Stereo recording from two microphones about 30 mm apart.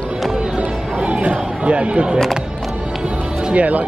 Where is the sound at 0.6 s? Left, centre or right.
Right.